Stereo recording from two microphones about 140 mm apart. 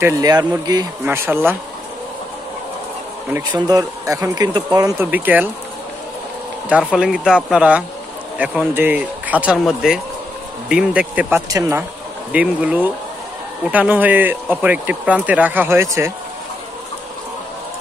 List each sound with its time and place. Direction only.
0.0 s speech: 25° right (ahead or behind)
1.0 s speech: 15° right (ahead or behind)
3.5 s speech: 25° right (ahead or behind)
5.1 s speech: 10° right (ahead or behind)
6.7 s speech: 5° right (ahead or behind)